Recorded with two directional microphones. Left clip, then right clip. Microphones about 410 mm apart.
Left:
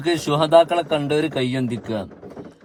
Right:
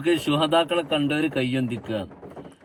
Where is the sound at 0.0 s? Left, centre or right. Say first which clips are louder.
Left 2 dB; centre.